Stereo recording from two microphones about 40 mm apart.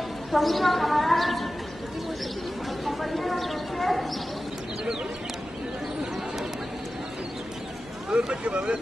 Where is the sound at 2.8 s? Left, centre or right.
Centre.